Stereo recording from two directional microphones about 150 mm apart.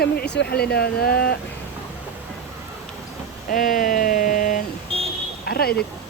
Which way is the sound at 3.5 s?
65° left (ahead or behind).